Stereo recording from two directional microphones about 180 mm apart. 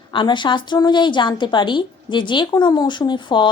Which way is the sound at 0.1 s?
25° left (ahead or behind).